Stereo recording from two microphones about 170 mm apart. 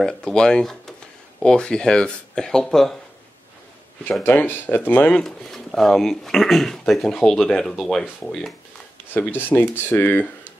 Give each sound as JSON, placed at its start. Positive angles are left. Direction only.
{"t": 0.0, "sound": "speech", "side_deg": 5}
{"t": 4.0, "sound": "speech", "side_deg": 10}